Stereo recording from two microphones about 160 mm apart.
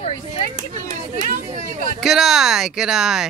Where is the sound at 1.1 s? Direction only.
50° right (ahead or behind).